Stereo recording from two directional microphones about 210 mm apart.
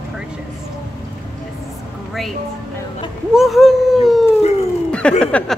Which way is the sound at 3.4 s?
Centre (ahead or behind).